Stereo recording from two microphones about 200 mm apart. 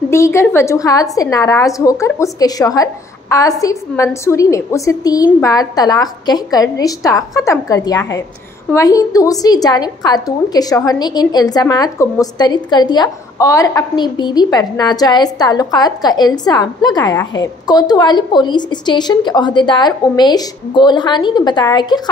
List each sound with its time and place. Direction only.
0.1 s a woman's voice: 15° left (ahead or behind)